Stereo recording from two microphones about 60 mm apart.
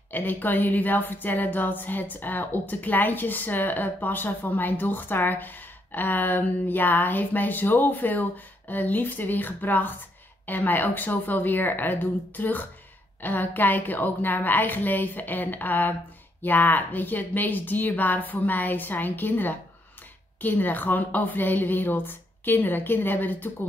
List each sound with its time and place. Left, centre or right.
0.1 s a woman's voice: left